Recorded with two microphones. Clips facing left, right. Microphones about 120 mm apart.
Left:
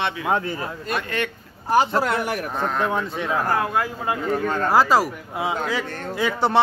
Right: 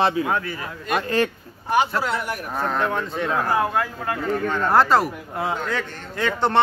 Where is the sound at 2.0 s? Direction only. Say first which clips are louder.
Left 2 dB; 65° left (ahead or behind).